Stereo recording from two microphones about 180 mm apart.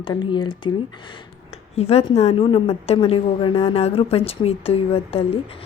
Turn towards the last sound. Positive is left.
turn(degrees=35)  # may be behind; listen again after turning